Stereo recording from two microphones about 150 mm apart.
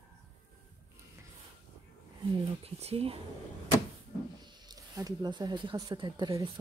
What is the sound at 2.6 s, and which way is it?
Speech, 40° right (ahead or behind).